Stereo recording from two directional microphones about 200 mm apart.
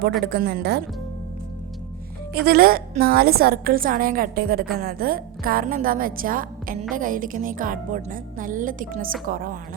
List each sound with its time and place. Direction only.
0.3 s a woman's voice: 55° right (ahead or behind)
2.3 s a woman's voice: 50° right (ahead or behind)